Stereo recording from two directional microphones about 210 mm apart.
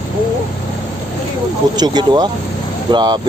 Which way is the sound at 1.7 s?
20° right (ahead or behind).